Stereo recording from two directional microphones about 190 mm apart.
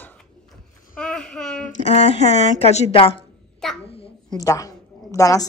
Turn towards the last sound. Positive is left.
turn(degrees=20)  # may be behind; listen again after turning